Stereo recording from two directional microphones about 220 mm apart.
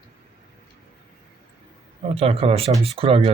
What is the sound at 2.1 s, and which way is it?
Speech, 25° right (ahead or behind).